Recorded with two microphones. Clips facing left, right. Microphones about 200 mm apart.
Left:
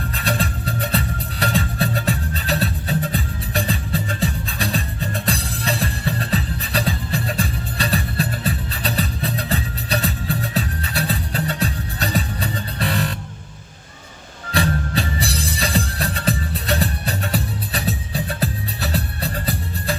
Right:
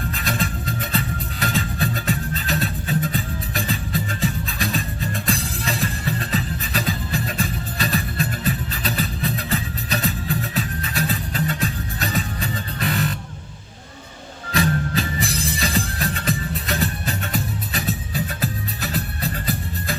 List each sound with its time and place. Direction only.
0.1 s music: 35° left (ahead or behind)
14.5 s music: 35° left (ahead or behind)